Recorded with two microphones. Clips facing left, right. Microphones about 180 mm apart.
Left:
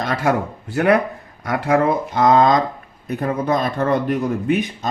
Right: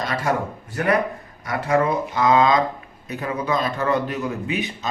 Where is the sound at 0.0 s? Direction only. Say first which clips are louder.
Left 4 dB; 60° left (ahead or behind).